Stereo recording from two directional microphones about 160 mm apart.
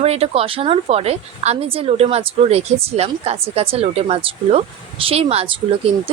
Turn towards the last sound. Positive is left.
turn(degrees=-35)  # may be behind; listen again after turning